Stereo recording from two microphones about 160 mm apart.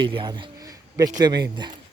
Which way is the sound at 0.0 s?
30° right (ahead or behind).